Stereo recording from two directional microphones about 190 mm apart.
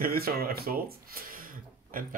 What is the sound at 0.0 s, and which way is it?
Speech, 50° right (ahead or behind).